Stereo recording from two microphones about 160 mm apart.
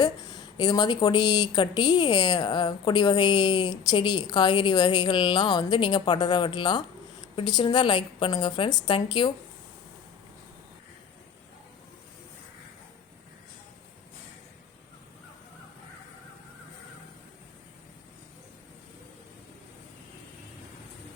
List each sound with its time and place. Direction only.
0.0 s a woman's voice: 25° left (ahead or behind)